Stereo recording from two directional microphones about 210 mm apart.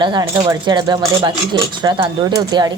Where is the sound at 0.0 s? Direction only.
20° right (ahead or behind).